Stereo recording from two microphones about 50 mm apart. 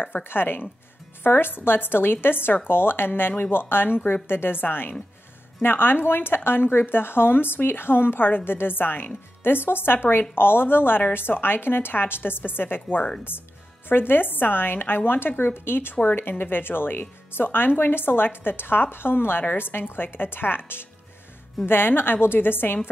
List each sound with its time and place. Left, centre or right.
0.0 s speech: left
13.8 s speech: left